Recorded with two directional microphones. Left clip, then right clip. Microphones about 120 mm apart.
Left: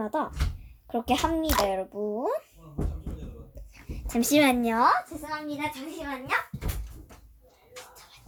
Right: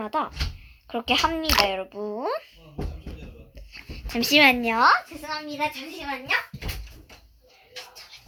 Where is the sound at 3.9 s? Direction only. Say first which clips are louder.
Right 4 dB; 45° left (ahead or behind).